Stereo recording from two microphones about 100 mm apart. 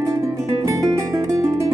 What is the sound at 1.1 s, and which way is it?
Music, 35° right (ahead or behind).